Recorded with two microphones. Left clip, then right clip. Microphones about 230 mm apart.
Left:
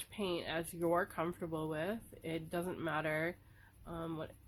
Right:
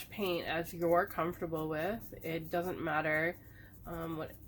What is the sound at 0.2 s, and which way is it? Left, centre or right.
Speech, left.